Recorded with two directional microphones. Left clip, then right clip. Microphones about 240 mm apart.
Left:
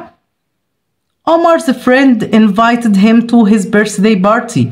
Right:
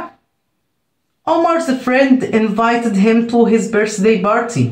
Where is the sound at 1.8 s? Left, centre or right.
Left.